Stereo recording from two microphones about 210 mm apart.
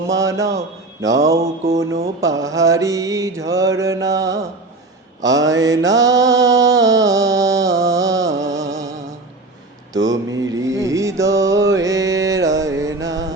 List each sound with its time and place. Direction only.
0.1 s mantra: 15° right (ahead or behind)
10.2 s mantra: 15° right (ahead or behind)